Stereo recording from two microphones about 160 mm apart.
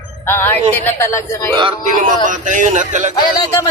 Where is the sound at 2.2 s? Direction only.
55° right (ahead or behind).